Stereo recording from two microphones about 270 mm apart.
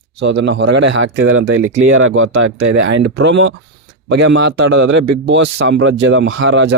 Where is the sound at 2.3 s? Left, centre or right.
Right.